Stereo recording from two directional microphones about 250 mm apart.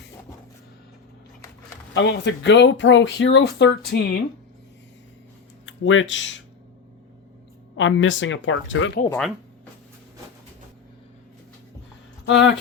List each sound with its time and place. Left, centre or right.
1.9 s speech: left
5.6 s speech: left
7.8 s speech: left
9.0 s speech: centre
12.2 s speech: left